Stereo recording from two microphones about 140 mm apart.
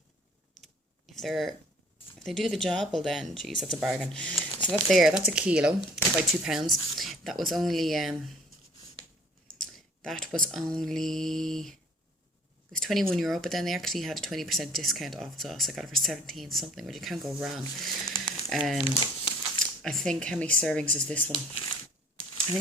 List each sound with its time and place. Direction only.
0.6 s computer keyboard: centre (ahead or behind)
2.1 s speech: centre (ahead or behind)
9.6 s speech: 5° left (ahead or behind)
12.7 s speech: centre (ahead or behind)
18.8 s speech: 35° left (ahead or behind)
19.5 s speech: centre (ahead or behind)